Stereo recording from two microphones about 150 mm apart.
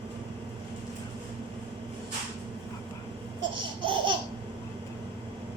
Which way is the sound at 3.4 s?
30° right (ahead or behind).